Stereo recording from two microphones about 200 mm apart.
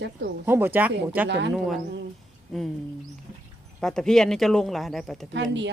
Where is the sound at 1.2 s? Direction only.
60° right (ahead or behind).